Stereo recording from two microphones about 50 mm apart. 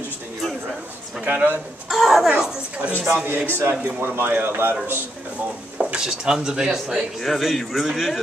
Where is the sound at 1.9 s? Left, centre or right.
Centre.